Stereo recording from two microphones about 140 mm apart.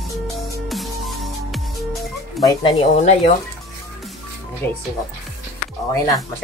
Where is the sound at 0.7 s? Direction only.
Centre (ahead or behind).